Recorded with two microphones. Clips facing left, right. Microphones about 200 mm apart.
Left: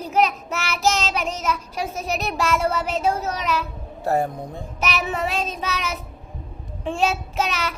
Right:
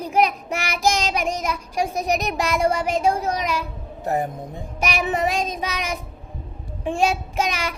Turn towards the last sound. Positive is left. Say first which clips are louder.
# right 1 dB
turn(degrees=-15)  # may be behind; listen again after turning